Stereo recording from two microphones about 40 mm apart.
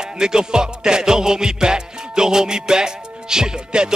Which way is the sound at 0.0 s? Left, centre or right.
Centre.